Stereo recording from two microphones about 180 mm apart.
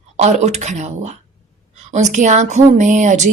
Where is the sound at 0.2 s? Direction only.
40° right (ahead or behind).